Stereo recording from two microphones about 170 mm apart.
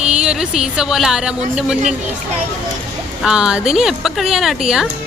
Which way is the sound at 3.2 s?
5° right (ahead or behind).